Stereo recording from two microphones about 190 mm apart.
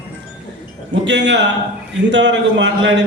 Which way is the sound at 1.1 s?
65° right (ahead or behind).